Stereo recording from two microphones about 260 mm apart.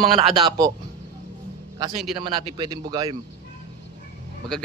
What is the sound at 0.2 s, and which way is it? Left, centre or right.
Speech, centre.